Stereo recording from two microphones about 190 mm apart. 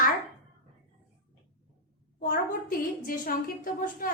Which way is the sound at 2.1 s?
50° left (ahead or behind).